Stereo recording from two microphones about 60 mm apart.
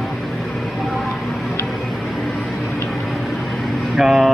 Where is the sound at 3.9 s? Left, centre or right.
Centre.